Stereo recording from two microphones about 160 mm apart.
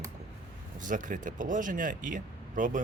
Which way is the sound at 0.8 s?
55° right (ahead or behind).